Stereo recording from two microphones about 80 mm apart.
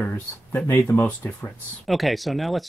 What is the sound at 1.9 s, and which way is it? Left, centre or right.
Speech, centre.